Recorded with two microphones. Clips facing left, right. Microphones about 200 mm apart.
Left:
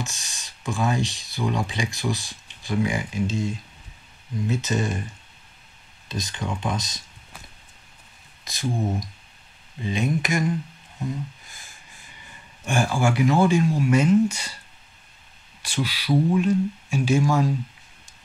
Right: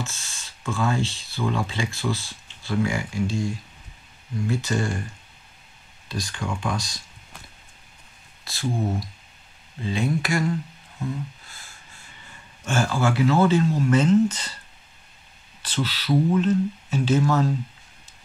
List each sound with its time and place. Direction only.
0.0 s speech: 15° left (ahead or behind)
8.5 s speech: 15° left (ahead or behind)
9.8 s speech: 20° left (ahead or behind)
15.6 s speech: 10° left (ahead or behind)